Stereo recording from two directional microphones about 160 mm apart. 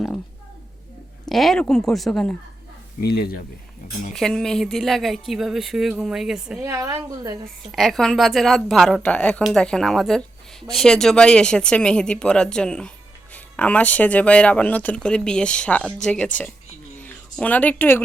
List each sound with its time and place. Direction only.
1.2 s speech: centre (ahead or behind)
3.0 s speech: 75° left (ahead or behind)
4.1 s speech: 5° left (ahead or behind)
6.7 s a woman's voice: 20° right (ahead or behind)
7.7 s speech: centre (ahead or behind)